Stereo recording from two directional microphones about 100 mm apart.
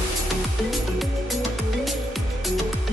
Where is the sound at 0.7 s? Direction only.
Centre (ahead or behind).